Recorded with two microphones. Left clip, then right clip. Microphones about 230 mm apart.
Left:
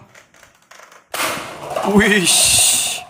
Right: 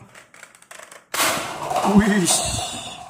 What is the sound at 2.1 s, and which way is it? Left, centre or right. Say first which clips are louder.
Speech: left 6 dB; left.